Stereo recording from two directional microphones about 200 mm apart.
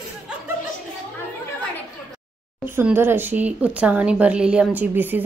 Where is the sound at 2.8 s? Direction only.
10° right (ahead or behind).